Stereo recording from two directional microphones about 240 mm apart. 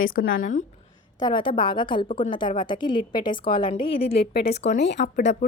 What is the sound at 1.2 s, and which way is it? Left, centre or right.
A woman's voice, centre.